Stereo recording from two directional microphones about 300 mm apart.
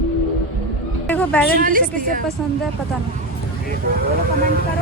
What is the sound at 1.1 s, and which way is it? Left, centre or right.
Speech, centre.